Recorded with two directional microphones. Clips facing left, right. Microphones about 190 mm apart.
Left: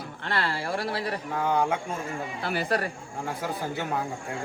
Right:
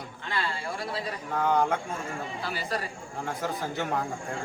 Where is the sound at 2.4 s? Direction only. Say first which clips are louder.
Left 6 dB; 60° left (ahead or behind).